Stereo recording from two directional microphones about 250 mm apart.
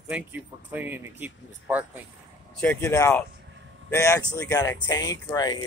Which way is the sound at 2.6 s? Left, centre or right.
Centre.